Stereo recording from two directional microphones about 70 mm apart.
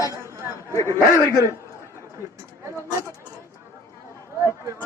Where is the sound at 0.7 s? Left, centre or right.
Left.